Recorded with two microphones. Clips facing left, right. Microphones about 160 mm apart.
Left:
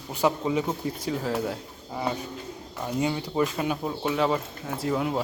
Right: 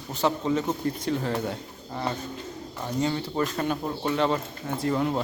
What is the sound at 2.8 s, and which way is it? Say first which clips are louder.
Speech: even; 10° left (ahead or behind).